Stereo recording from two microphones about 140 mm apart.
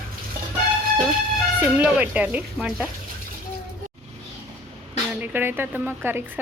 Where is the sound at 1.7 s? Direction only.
10° right (ahead or behind).